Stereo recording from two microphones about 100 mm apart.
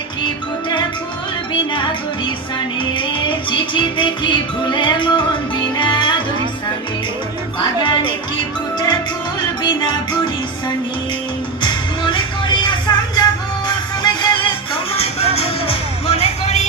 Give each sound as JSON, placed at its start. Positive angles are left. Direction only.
{"t": 1.7, "sound": "music", "side_deg": 55}
{"t": 7.6, "sound": "music", "side_deg": 55}
{"t": 9.6, "sound": "music", "side_deg": 50}
{"t": 11.6, "sound": "music", "side_deg": 50}
{"t": 14.9, "sound": "music", "side_deg": 85}